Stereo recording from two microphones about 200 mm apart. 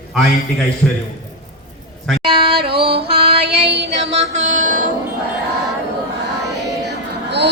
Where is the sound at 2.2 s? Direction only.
25° right (ahead or behind).